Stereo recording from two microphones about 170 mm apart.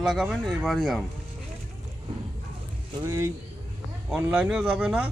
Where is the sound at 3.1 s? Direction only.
15° right (ahead or behind).